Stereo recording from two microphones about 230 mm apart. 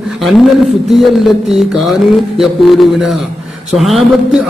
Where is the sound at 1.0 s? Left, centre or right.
Centre.